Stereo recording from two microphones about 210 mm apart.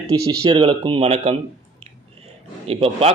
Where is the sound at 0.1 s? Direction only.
20° right (ahead or behind).